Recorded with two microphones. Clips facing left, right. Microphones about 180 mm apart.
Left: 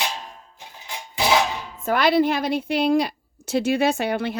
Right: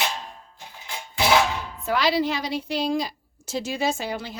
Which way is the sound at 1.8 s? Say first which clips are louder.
Left 4 dB; 55° left (ahead or behind).